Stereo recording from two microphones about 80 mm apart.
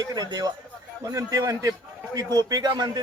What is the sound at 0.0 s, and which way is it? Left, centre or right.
A man's voice, right.